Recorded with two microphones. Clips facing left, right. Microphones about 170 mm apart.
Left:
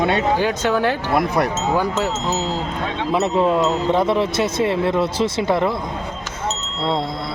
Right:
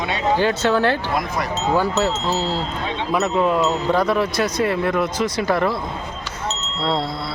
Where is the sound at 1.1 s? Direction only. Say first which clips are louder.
Left 5 dB; 60° left (ahead or behind).